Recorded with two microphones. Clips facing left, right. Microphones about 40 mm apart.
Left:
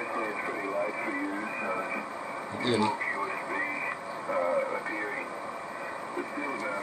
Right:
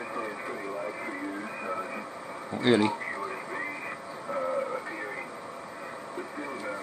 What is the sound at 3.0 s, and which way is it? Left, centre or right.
Radio, centre.